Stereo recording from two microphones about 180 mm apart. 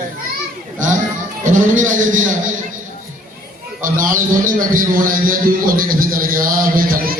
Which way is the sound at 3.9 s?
50° right (ahead or behind).